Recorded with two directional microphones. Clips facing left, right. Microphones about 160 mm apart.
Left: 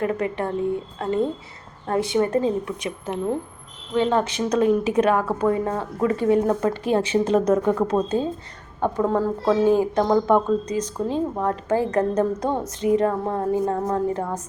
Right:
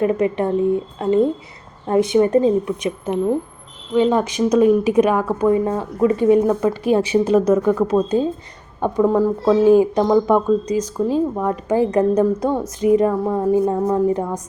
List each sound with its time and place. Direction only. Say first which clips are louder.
0.0 s a woman's voice: right 6 dB; 20° right (ahead or behind)